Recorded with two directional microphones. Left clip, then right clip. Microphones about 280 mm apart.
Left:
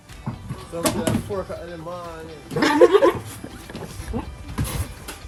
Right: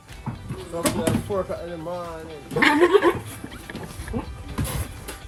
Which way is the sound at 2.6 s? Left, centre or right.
Left.